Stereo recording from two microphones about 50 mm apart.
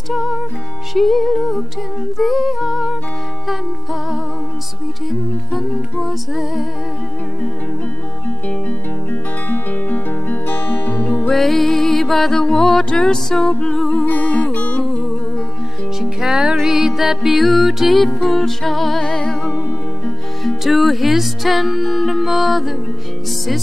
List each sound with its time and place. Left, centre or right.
0.1 s music: centre
5.5 s music: centre
9.1 s guitar: left
11.1 s music: left
11.3 s music: centre
14.2 s music: left
16.0 s music: centre
20.4 s music: centre